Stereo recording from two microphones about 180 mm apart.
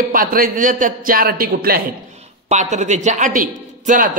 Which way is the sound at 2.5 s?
40° right (ahead or behind).